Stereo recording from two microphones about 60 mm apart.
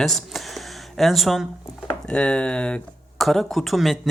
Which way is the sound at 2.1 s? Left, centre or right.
Centre.